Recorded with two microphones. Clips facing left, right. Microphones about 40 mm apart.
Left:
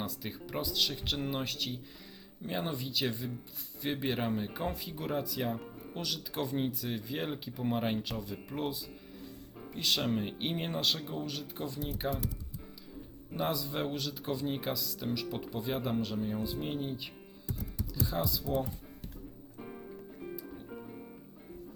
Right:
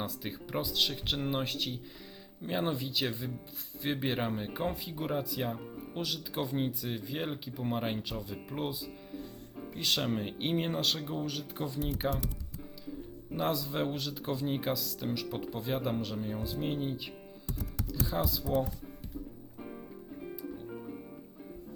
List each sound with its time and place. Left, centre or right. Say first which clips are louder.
0.0 s speech: right 1 dB; centre
12.0 s speech: right 1 dB; right
13.3 s speech: right 2 dB; centre
19.5 s music: even; centre